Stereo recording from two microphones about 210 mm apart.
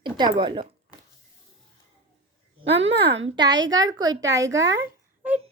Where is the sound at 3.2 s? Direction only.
20° right (ahead or behind).